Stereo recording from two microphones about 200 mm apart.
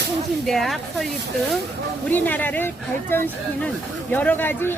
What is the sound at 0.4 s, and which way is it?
Speech, centre (ahead or behind).